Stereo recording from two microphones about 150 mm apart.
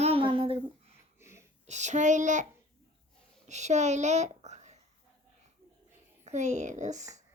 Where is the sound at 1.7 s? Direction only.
50° right (ahead or behind).